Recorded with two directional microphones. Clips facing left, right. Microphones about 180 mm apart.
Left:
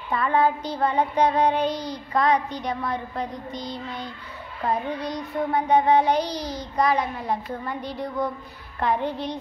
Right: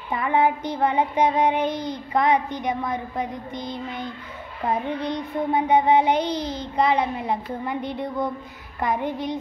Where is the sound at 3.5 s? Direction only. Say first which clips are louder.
Right 1 dB; 55° right (ahead or behind).